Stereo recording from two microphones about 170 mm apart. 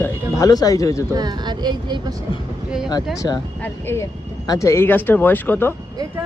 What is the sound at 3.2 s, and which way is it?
Speech, 25° left (ahead or behind).